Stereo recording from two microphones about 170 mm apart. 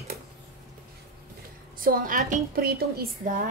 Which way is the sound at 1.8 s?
55° right (ahead or behind).